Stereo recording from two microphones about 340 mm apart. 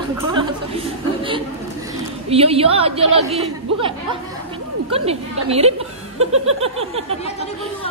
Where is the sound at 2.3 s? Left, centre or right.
Centre.